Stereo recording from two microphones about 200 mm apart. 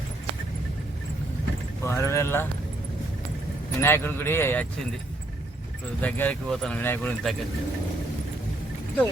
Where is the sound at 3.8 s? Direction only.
10° left (ahead or behind).